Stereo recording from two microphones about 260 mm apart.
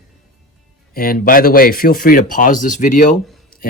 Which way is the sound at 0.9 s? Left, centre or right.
Left.